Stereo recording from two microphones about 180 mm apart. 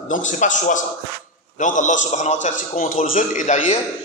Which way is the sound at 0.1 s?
45° left (ahead or behind).